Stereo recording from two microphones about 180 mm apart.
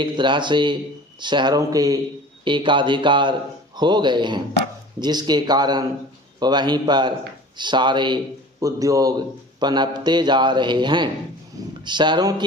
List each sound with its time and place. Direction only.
0.0 s a man's voice: 25° right (ahead or behind)